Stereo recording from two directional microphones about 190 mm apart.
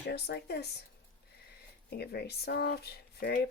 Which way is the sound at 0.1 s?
60° left (ahead or behind).